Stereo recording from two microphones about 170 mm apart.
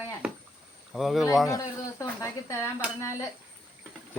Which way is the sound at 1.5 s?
20° left (ahead or behind).